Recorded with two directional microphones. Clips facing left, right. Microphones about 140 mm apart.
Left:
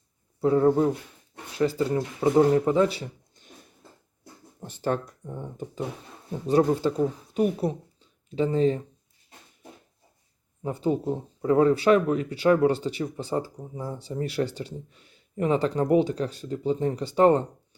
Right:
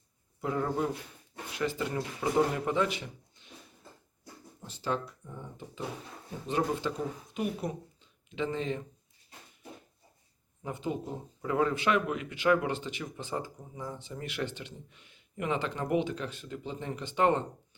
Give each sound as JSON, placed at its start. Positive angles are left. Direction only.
{"t": 0.4, "sound": "speech", "side_deg": 30}
{"t": 4.6, "sound": "speech", "side_deg": 50}
{"t": 6.5, "sound": "speech", "side_deg": 35}
{"t": 10.6, "sound": "speech", "side_deg": 35}